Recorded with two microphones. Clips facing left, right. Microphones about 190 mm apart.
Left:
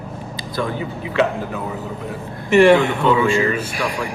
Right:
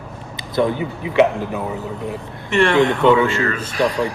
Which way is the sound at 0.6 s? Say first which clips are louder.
Right 6 dB; 20° right (ahead or behind).